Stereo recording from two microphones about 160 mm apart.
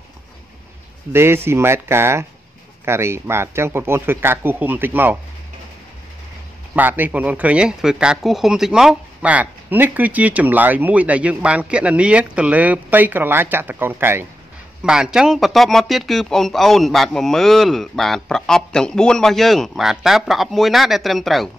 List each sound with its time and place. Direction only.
1.1 s speech: 15° right (ahead or behind)
6.7 s speech: 10° right (ahead or behind)